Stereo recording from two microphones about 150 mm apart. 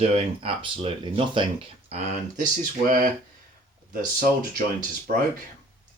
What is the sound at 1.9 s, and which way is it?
Speech, 50° right (ahead or behind).